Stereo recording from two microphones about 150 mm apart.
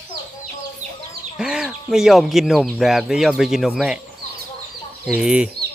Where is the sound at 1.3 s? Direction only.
5° right (ahead or behind).